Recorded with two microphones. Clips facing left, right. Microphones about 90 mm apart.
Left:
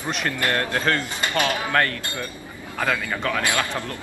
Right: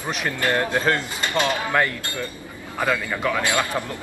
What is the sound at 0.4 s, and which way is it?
A man's voice, 15° right (ahead or behind).